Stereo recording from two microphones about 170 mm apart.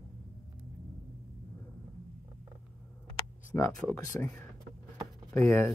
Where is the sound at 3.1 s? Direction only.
15° left (ahead or behind).